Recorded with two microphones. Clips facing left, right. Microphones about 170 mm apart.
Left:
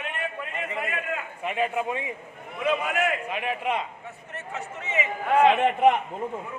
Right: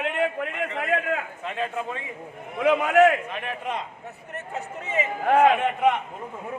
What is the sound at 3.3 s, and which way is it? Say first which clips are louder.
Speech: left 3 dB; 10° left (ahead or behind).